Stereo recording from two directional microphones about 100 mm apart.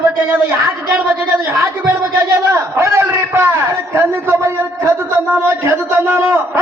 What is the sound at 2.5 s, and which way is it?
A man's voice, 30° right (ahead or behind).